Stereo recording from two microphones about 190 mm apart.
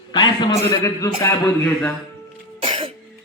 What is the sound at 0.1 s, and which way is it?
A man's voice, 25° left (ahead or behind).